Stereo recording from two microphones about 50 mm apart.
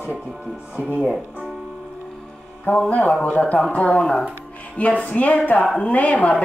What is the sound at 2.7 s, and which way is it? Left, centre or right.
Speech, left.